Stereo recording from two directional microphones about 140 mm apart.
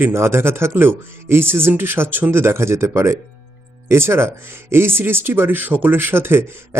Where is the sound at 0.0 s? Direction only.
20° right (ahead or behind).